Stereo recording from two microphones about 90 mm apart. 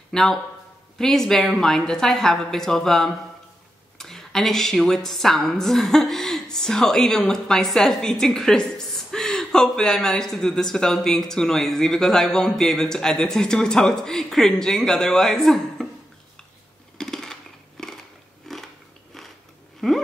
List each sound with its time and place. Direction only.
0.1 s a woman's voice: 5° left (ahead or behind)
17.0 s a sound: 5° left (ahead or behind)
18.5 s biting: 5° left (ahead or behind)
19.8 s a woman's voice: 5° left (ahead or behind)